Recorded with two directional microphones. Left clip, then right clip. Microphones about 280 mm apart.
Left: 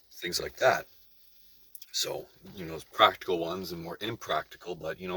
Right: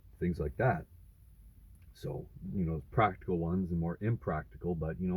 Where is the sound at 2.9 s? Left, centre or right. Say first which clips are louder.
Left 7 dB; centre.